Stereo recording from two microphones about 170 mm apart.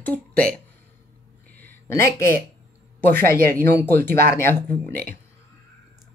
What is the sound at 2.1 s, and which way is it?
Speech, 15° left (ahead or behind).